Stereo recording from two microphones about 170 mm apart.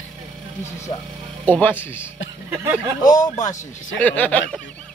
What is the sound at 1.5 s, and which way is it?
Speech, 10° left (ahead or behind).